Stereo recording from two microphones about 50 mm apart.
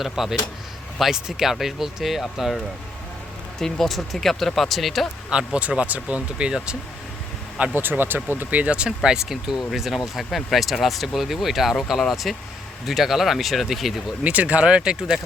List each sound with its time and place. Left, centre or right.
0.0 s speech: centre
3.6 s speech: centre
5.5 s speech: right
7.7 s speech: right
8.4 s speech: right
9.0 s speech: centre
14.3 s speech: right